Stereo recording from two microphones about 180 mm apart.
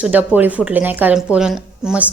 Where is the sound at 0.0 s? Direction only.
10° right (ahead or behind).